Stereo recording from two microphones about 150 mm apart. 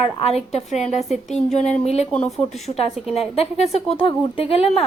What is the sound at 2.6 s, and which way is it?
Speech, 45° left (ahead or behind).